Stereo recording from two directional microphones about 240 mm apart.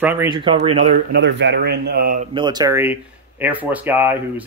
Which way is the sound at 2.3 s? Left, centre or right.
Centre.